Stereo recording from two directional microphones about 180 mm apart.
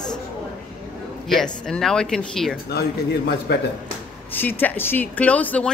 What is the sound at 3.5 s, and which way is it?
Speech, 65° left (ahead or behind).